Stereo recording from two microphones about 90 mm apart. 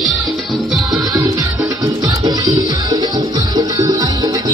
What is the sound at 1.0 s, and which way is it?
Music, 45° right (ahead or behind).